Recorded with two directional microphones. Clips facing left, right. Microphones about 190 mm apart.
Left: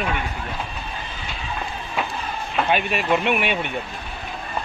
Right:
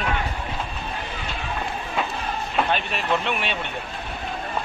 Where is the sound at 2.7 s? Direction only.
10° left (ahead or behind).